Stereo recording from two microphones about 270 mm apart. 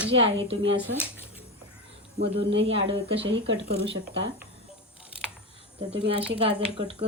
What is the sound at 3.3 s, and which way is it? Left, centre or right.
Speech, right.